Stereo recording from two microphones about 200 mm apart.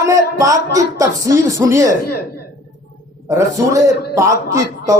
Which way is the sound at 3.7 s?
15° right (ahead or behind).